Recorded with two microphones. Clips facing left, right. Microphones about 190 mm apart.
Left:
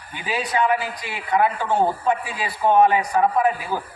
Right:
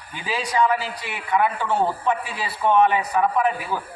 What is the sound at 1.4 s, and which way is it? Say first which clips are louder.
A man's voice: left 2 dB; 20° left (ahead or behind).